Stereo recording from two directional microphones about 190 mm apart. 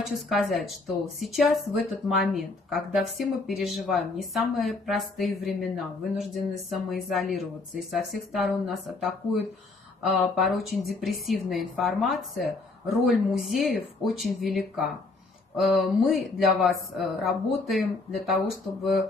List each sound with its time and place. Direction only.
0.0 s a woman's voice: centre (ahead or behind)